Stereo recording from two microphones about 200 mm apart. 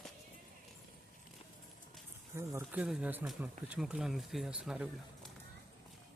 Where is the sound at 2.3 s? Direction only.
15° right (ahead or behind).